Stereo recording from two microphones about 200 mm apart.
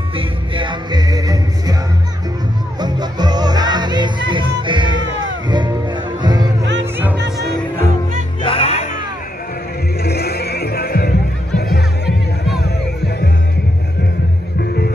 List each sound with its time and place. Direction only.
0.1 s music: 25° right (ahead or behind)
2.8 s music: 20° right (ahead or behind)
6.6 s music: 60° right (ahead or behind)
8.4 s music: 25° left (ahead or behind)
10.0 s music: 55° left (ahead or behind)